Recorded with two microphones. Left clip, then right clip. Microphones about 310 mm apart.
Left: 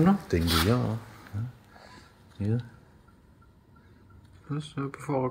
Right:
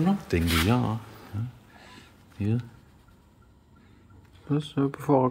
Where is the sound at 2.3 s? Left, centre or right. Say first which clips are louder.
Right 2 dB; centre.